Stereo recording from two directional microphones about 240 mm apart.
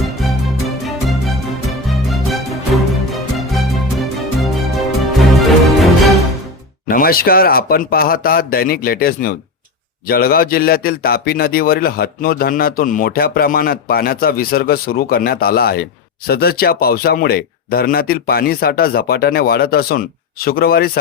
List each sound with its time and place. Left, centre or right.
0.0 s music: centre
6.8 s a man's voice: left